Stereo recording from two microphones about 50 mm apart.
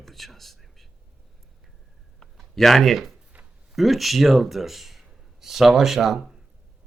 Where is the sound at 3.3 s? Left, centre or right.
Right.